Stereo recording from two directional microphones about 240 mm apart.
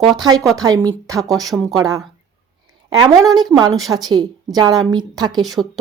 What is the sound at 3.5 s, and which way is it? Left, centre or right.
A woman's voice, centre.